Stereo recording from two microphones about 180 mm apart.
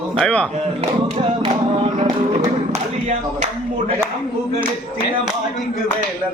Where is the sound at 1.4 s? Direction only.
30° right (ahead or behind).